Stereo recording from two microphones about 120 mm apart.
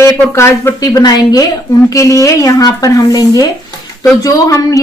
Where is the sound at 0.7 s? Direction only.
30° left (ahead or behind).